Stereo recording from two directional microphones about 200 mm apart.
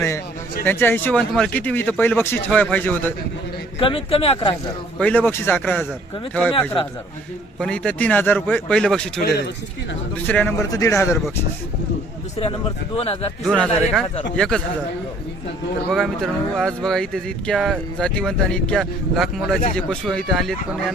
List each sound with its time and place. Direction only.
0.6 s speech: 10° left (ahead or behind)
3.8 s speech: 25° left (ahead or behind)
4.9 s speech: 5° left (ahead or behind)
7.6 s speech: 5° left (ahead or behind)
10.2 s speech: 10° left (ahead or behind)
13.0 s speech: 30° left (ahead or behind)
13.4 s speech: centre (ahead or behind)
15.9 s speech: centre (ahead or behind)